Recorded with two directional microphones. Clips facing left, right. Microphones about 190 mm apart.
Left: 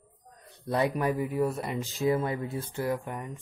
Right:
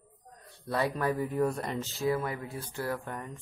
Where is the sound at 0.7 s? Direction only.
20° left (ahead or behind).